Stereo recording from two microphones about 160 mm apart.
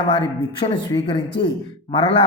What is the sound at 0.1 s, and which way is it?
Speech, 30° left (ahead or behind).